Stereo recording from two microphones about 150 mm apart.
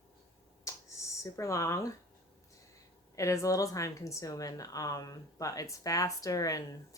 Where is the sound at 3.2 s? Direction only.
20° left (ahead or behind).